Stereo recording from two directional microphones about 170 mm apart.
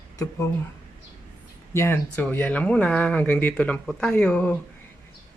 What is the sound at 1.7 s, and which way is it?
Speech, 15° left (ahead or behind).